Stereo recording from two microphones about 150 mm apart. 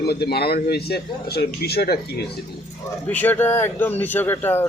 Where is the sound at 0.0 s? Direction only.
90° left.